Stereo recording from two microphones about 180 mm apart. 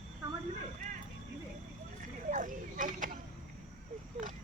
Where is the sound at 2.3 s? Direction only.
45° right (ahead or behind).